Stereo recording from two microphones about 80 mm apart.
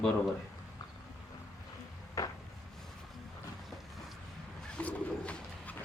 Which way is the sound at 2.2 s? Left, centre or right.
Left.